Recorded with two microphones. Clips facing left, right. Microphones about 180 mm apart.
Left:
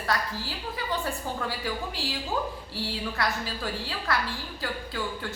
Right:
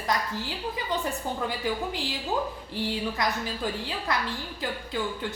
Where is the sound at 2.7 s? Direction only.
20° right (ahead or behind).